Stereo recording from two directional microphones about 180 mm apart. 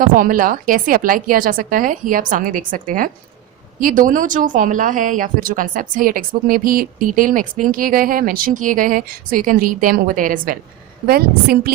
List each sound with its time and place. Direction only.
0.0 s a woman's voice: 50° right (ahead or behind)